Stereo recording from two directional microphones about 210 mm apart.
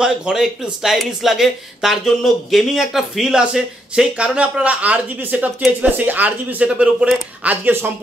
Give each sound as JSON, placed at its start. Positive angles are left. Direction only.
{"t": 0.0, "sound": "speech", "side_deg": -5}